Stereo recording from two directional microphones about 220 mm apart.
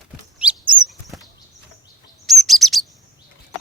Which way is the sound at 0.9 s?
Centre (ahead or behind).